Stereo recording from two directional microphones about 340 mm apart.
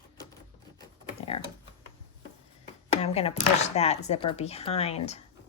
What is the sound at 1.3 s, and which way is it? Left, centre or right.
Speech, centre.